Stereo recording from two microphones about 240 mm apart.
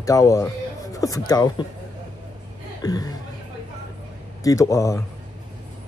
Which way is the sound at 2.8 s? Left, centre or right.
Centre.